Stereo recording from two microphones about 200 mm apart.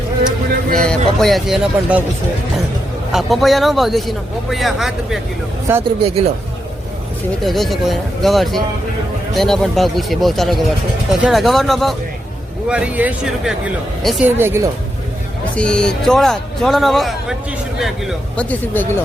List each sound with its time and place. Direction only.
0.3 s speech: 5° left (ahead or behind)
3.1 s speech: centre (ahead or behind)
7.4 s speech: centre (ahead or behind)
15.5 s speech: 5° left (ahead or behind)